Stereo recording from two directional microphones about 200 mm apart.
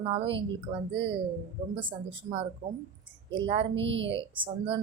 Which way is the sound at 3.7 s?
65° right (ahead or behind).